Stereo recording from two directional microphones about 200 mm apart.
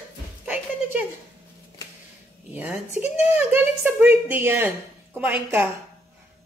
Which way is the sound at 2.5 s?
10° right (ahead or behind).